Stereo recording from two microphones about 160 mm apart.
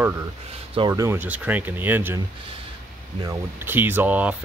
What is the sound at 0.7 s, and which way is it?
Speech, 20° right (ahead or behind).